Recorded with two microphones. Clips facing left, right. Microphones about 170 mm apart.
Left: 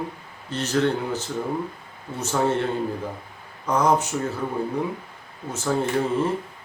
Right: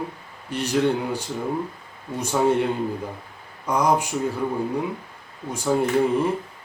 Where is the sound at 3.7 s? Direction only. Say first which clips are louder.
Even; 10° right (ahead or behind).